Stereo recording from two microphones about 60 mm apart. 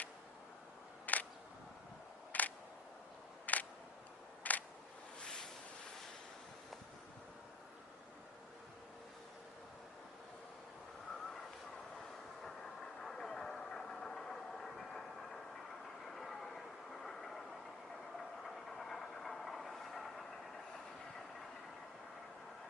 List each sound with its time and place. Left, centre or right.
1.0 s single-lens reflex camera: left
2.3 s single-lens reflex camera: left
5.2 s boat: centre
12.4 s vehicle: centre
18.4 s vehicle: centre